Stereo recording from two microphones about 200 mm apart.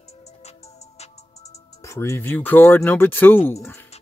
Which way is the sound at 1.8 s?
15° left (ahead or behind).